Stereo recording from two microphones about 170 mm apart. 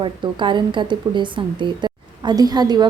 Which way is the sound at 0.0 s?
30° right (ahead or behind).